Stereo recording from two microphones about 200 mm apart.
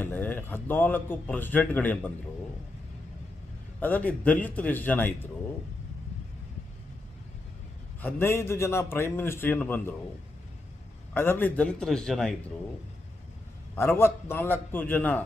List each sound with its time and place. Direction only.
0.0 s a man's voice: 10° left (ahead or behind)
3.8 s a man's voice: 10° left (ahead or behind)
8.0 s a man's voice: 10° left (ahead or behind)
11.1 s a man's voice: 10° left (ahead or behind)
13.7 s a man's voice: 10° left (ahead or behind)